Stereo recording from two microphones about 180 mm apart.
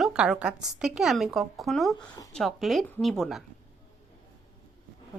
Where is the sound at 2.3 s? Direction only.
Centre (ahead or behind).